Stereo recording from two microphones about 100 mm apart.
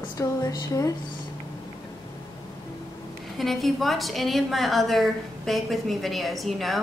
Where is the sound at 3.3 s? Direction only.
Centre (ahead or behind).